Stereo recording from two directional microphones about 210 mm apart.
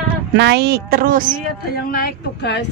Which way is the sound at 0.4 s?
50° right (ahead or behind).